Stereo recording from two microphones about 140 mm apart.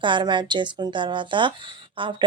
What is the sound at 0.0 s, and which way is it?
A woman's voice, 35° right (ahead or behind).